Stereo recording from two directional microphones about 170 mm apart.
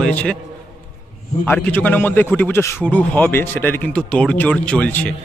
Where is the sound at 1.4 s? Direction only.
10° left (ahead or behind).